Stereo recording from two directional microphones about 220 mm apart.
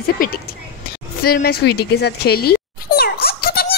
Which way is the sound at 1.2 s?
45° left (ahead or behind).